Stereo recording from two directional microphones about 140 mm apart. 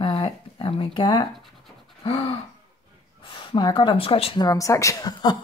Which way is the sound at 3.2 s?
40° left (ahead or behind).